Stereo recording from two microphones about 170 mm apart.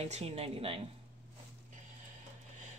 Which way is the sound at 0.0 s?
40° right (ahead or behind).